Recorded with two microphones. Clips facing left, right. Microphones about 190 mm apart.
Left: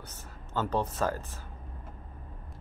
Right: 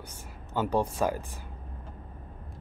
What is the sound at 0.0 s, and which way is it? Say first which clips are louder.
Speech: right 2 dB; 10° right (ahead or behind).